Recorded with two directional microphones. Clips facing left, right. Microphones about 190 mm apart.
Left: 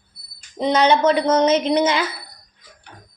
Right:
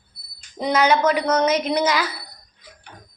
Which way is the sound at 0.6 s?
25° left (ahead or behind).